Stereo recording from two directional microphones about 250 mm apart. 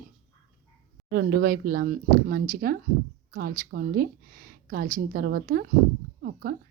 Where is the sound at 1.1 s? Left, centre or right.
Right.